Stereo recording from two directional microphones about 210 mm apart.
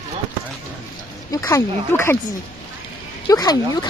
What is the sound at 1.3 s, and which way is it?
Speech, 15° left (ahead or behind).